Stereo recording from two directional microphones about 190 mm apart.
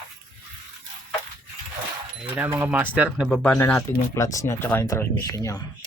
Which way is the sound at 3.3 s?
10° left (ahead or behind).